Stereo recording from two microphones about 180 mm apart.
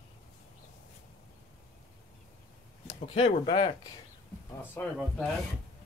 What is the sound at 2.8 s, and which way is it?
Speech, 35° left (ahead or behind).